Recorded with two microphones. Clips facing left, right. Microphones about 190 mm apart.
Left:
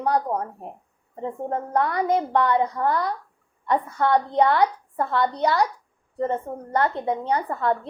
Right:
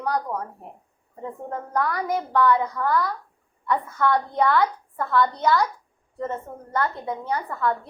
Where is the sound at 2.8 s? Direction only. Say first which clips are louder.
Even; 25° left (ahead or behind).